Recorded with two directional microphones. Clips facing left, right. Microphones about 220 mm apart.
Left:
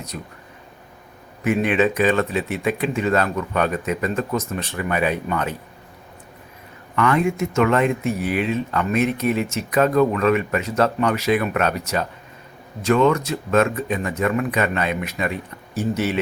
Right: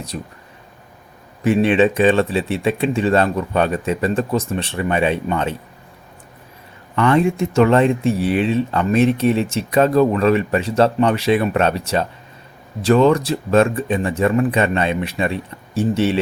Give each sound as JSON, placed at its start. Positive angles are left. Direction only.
{"t": 0.1, "sound": "speech", "side_deg": -30}
{"t": 1.5, "sound": "speech", "side_deg": -30}
{"t": 6.9, "sound": "speech", "side_deg": -30}